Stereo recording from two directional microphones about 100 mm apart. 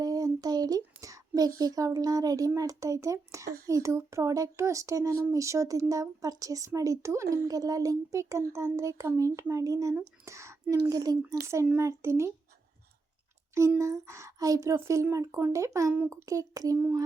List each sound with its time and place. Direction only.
0.0 s a sound: 40° right (ahead or behind)
1.0 s a woman's voice: 35° right (ahead or behind)
11.3 s a woman's voice: 30° right (ahead or behind)
13.5 s a woman's voice: 30° right (ahead or behind)